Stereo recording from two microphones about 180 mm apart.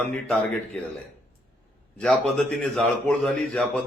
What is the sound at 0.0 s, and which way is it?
Speech, 5° left (ahead or behind).